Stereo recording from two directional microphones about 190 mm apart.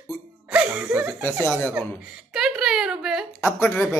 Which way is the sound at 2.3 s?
5° right (ahead or behind).